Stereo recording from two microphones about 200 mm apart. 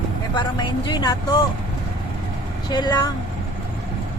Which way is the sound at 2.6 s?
20° left (ahead or behind).